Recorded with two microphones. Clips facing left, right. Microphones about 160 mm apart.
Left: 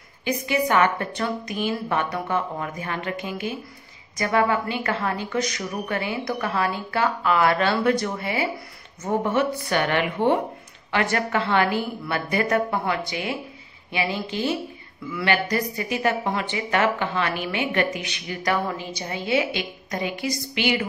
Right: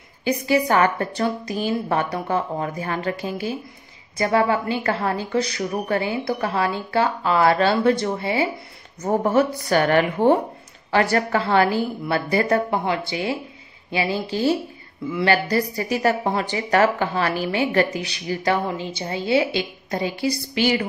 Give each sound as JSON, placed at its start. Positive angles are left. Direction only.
{"t": 0.2, "sound": "a woman's voice", "side_deg": -35}
{"t": 9.0, "sound": "a woman's voice", "side_deg": -40}